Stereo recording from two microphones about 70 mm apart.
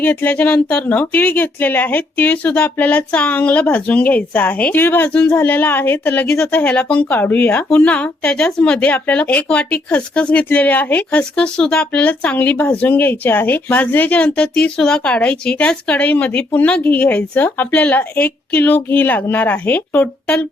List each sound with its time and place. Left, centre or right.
0.2 s speech: left
6.5 s speech: left